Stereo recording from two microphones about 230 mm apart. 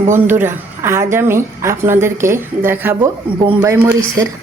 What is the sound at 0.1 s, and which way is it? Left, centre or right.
Speech, centre.